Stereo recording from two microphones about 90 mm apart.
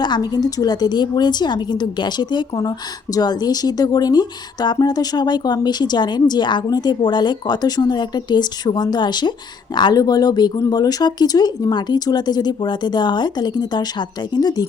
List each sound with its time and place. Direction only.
0.0 s a woman's voice: 50° left (ahead or behind)